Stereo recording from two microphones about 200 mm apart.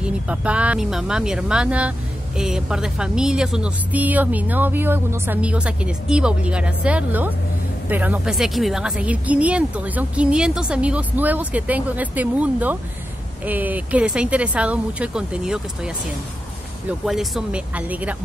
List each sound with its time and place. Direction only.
0.0 s a woman's voice: 5° right (ahead or behind)
17.0 s speech: centre (ahead or behind)